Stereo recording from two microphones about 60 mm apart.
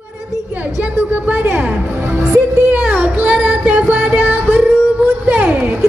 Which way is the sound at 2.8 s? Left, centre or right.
Right.